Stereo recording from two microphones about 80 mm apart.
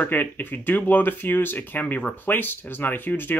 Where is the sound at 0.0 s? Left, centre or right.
Left.